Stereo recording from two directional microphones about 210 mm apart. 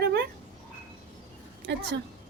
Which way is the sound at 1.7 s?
55° right (ahead or behind).